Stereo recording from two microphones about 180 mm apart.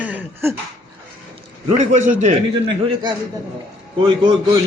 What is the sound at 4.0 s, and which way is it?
Speech, 25° right (ahead or behind).